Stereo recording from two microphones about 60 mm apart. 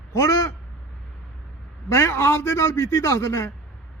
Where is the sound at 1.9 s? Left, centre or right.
Left.